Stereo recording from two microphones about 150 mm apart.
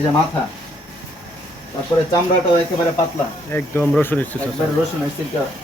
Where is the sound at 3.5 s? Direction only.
15° left (ahead or behind).